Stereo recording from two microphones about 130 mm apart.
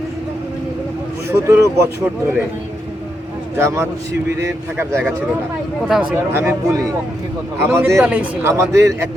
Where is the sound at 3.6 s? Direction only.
25° right (ahead or behind).